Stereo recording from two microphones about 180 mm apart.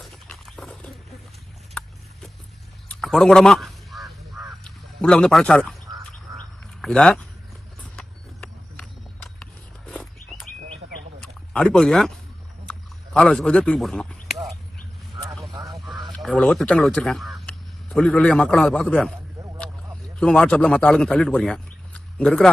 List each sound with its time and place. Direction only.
0.0 s dog: centre (ahead or behind)
2.9 s crow: 5° left (ahead or behind)
6.8 s speech: 5° left (ahead or behind)
7.9 s a sound: 5° left (ahead or behind)
13.1 s speech: 5° left (ahead or behind)
15.7 s speech: centre (ahead or behind)
20.1 s speech: 5° left (ahead or behind)